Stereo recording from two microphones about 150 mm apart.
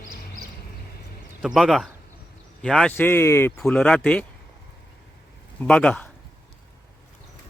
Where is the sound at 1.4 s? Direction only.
Centre (ahead or behind); by 3.5 s 15° left (ahead or behind).